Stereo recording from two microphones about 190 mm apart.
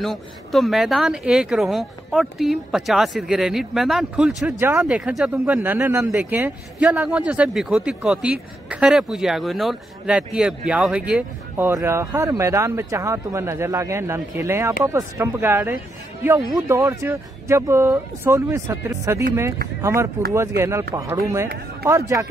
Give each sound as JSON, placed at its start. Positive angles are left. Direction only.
{"t": 0.0, "sound": "speech", "side_deg": 0}